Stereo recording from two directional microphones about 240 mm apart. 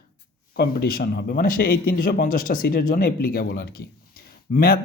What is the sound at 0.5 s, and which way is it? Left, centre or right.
Speech, left.